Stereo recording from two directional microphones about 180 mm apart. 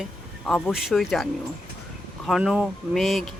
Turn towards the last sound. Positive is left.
turn(degrees=0)  # may be behind; listen again after turning